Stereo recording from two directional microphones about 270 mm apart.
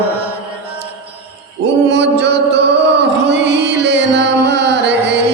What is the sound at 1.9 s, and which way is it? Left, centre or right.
Mantra, right.